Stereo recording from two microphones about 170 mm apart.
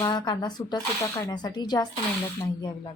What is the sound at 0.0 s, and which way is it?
Speech, 25° left (ahead or behind).